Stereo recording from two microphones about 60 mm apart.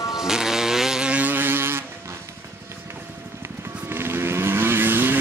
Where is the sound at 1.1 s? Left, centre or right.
Right.